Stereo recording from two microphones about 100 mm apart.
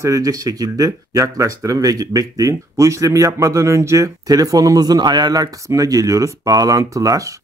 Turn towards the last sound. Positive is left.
turn(degrees=-35)  # may be behind; listen again after turning